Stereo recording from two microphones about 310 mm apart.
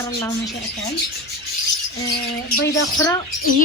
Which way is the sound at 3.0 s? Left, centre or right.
Centre.